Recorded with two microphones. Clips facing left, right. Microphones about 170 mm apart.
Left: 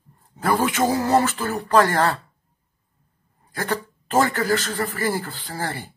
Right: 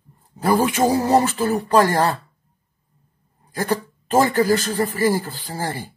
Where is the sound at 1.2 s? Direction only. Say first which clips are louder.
Right 4 dB; 35° right (ahead or behind).